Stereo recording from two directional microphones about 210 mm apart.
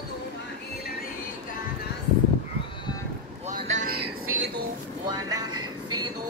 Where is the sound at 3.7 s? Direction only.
85° right.